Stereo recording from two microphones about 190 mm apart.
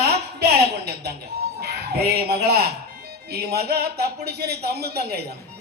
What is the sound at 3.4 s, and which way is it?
A man's voice, 55° right (ahead or behind).